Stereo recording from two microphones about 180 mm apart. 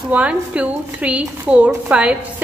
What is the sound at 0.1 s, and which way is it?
A woman's voice, 10° right (ahead or behind).